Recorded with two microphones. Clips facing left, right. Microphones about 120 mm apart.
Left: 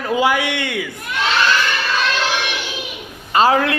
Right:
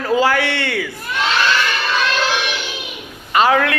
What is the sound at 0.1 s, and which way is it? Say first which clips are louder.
Speech: right 1 dB; 15° left (ahead or behind).